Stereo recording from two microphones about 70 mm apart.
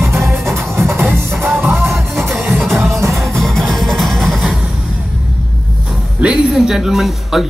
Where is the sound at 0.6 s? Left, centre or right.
Right.